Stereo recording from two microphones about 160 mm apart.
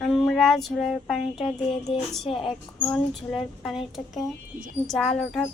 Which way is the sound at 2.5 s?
Centre (ahead or behind).